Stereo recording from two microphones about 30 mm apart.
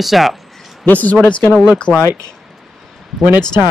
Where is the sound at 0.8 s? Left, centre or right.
Left.